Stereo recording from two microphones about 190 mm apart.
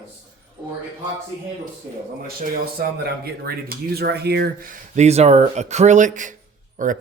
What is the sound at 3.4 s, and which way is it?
Speech, 55° right (ahead or behind).